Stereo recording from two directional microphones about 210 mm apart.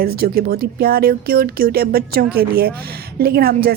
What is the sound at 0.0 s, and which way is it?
Speech, 45° right (ahead or behind).